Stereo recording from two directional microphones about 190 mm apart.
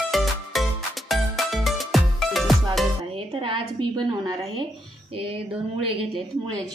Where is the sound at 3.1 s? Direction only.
30° right (ahead or behind).